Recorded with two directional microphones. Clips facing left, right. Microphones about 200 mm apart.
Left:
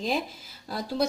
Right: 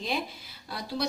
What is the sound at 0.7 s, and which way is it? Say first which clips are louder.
Speech: left 4 dB; 45° left (ahead or behind).